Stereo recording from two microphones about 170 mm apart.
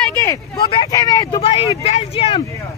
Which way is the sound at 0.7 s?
25° left (ahead or behind).